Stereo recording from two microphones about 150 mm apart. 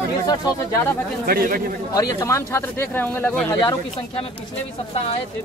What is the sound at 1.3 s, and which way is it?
Speech, 80° right.